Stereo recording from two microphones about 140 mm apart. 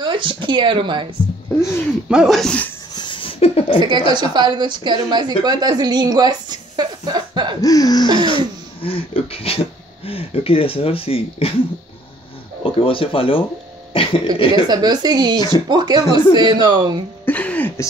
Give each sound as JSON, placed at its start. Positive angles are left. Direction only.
{"t": 0.0, "sound": "a woman's voice", "side_deg": -35}
{"t": 2.0, "sound": "speech", "side_deg": -5}
{"t": 2.9, "sound": "a sound", "side_deg": 35}
{"t": 4.1, "sound": "a woman's voice", "side_deg": -30}
{"t": 7.6, "sound": "a sound", "side_deg": 25}
{"t": 8.3, "sound": "speech", "side_deg": 40}
{"t": 12.6, "sound": "speech", "side_deg": 40}
{"t": 14.5, "sound": "a woman's voice", "side_deg": -30}
{"t": 17.2, "sound": "a sound", "side_deg": 10}